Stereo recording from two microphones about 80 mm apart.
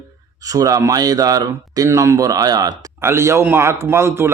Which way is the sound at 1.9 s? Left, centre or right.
Right.